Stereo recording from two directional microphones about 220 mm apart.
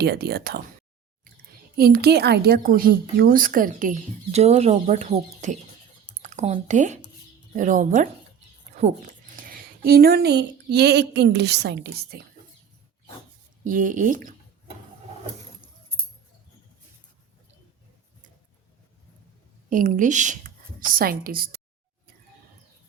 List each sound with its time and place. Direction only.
0.0 s speech: 45° right (ahead or behind)
1.7 s a woman's voice: 45° right (ahead or behind)
9.3 s speech: 40° right (ahead or behind)
13.7 s a woman's voice: 35° right (ahead or behind)
19.7 s speech: 35° right (ahead or behind)